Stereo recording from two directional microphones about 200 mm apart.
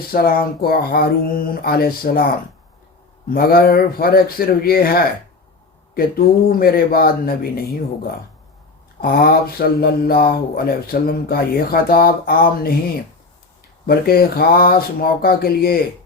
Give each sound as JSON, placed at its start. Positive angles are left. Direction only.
{"t": 0.1, "sound": "speech", "side_deg": 45}
{"t": 9.0, "sound": "speech", "side_deg": 45}
{"t": 13.8, "sound": "speech", "side_deg": 50}